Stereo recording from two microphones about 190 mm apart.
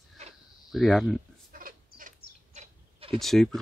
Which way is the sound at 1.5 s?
50° right (ahead or behind).